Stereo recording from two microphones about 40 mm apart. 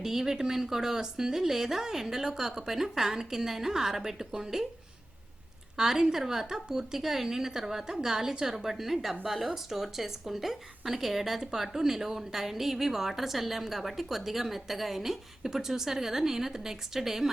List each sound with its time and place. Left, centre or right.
0.0 s speech: centre
5.7 s a woman's voice: centre